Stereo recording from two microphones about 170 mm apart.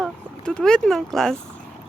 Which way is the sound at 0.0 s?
5° left (ahead or behind).